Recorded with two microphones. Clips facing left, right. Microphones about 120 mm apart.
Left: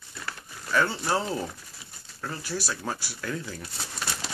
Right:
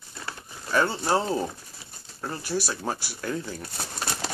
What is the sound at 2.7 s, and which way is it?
Speech, 30° right (ahead or behind).